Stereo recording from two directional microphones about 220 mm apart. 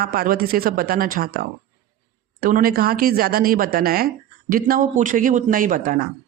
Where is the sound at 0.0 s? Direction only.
45° right (ahead or behind).